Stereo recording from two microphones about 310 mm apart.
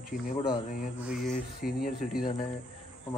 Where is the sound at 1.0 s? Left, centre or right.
Centre.